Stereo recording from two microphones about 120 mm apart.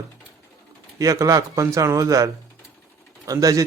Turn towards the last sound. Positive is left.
turn(degrees=-30)  # may be behind; listen again after turning